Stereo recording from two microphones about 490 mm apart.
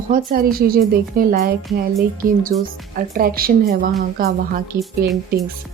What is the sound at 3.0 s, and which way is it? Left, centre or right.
A woman's voice, centre.